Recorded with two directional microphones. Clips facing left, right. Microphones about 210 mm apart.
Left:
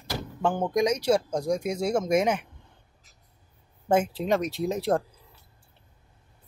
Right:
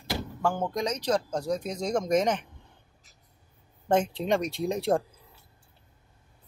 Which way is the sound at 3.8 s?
5° left (ahead or behind).